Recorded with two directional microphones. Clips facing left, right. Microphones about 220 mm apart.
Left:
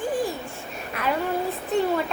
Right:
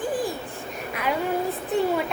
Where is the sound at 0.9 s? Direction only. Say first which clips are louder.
Left 1 dB; 10° right (ahead or behind).